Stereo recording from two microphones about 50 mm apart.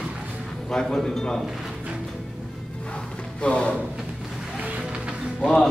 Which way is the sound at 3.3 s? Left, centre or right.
Left.